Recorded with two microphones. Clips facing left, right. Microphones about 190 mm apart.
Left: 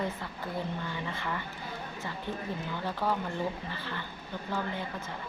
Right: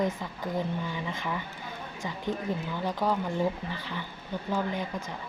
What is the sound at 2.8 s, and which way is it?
Speech, 15° right (ahead or behind).